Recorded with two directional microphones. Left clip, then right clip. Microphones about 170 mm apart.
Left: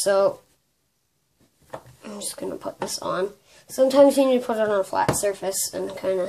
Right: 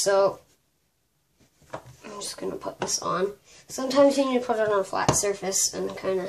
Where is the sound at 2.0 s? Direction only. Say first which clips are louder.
Left 1 dB; 50° left (ahead or behind).